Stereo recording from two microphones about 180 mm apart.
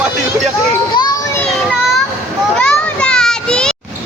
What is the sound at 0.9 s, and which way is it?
Children playing, 20° left (ahead or behind).